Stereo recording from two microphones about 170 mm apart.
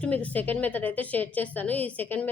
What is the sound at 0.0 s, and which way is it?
A woman's voice, 10° left (ahead or behind).